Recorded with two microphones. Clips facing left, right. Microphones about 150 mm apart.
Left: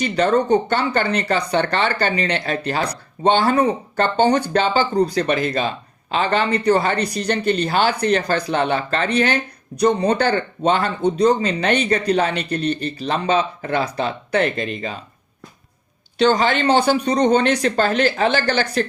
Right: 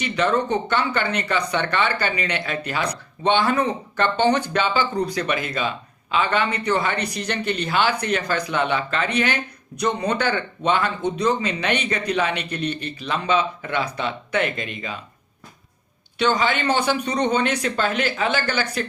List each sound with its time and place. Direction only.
0.0 s speech: 35° left (ahead or behind)
16.1 s speech: 40° left (ahead or behind)